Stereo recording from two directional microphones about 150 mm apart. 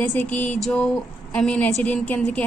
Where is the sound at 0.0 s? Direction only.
10° left (ahead or behind).